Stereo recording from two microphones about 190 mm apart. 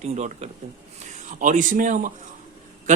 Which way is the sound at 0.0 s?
35° right (ahead or behind).